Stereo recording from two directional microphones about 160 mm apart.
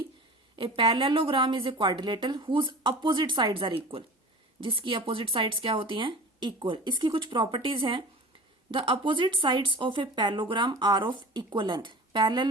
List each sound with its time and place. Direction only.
0.5 s a woman's voice: 35° right (ahead or behind)